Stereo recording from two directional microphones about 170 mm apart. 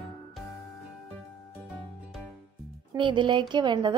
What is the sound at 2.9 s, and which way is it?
A woman's voice, 30° right (ahead or behind).